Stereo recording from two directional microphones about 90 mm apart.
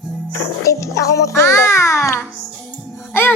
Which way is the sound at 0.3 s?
35° left (ahead or behind).